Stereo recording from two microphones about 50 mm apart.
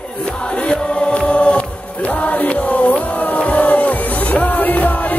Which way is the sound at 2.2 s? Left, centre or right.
Left.